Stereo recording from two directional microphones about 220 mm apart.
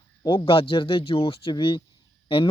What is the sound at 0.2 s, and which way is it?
Speech, 20° left (ahead or behind).